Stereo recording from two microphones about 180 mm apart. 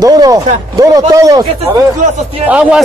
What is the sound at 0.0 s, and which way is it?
Speech, 20° right (ahead or behind).